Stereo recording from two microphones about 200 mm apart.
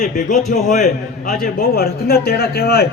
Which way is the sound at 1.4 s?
45° left (ahead or behind).